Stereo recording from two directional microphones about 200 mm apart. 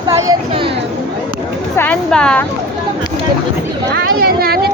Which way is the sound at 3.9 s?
50° right (ahead or behind).